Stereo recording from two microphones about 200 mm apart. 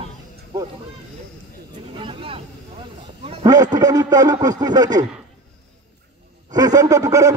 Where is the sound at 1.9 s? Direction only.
25° right (ahead or behind).